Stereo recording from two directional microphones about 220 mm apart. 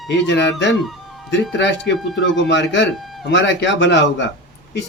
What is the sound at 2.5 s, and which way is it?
Speech, 55° left (ahead or behind).